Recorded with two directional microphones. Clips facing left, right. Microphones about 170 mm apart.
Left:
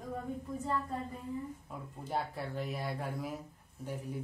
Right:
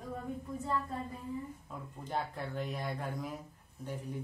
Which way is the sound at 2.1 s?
10° left (ahead or behind).